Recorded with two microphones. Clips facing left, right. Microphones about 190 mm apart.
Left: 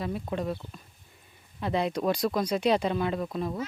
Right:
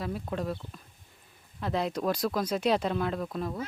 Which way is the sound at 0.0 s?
Centre (ahead or behind).